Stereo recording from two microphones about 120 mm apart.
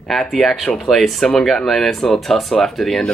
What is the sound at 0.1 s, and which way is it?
Speech, 5° left (ahead or behind).